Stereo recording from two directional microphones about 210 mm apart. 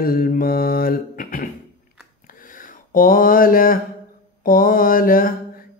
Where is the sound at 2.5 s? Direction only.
40° left (ahead or behind).